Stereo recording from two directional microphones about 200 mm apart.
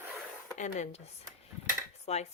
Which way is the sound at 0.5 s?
35° left (ahead or behind).